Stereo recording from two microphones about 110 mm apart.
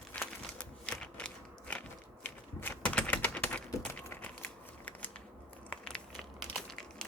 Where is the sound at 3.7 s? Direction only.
25° left (ahead or behind).